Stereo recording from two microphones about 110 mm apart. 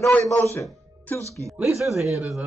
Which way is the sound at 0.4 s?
25° left (ahead or behind).